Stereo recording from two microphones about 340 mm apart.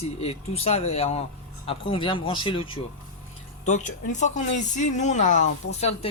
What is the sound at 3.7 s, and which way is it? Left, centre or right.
Speech, left.